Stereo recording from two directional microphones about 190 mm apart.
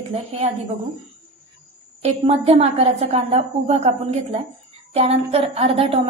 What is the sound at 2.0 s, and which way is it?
A woman's voice, 35° right (ahead or behind).